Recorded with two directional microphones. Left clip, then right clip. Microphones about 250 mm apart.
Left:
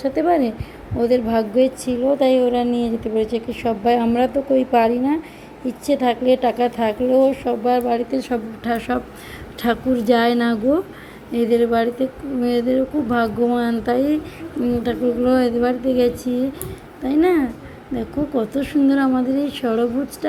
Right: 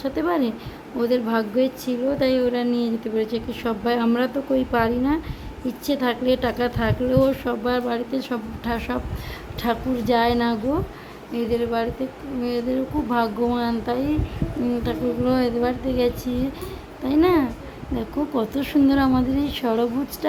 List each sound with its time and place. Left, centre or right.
0.0 s a woman's voice: centre